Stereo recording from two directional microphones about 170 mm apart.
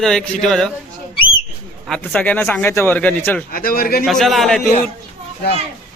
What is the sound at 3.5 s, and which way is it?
Speech, 55° left (ahead or behind).